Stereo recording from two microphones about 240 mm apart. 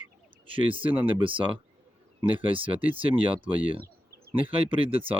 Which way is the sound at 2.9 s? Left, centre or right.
Right.